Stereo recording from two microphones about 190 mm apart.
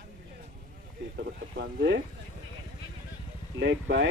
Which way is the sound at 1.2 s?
55° right (ahead or behind).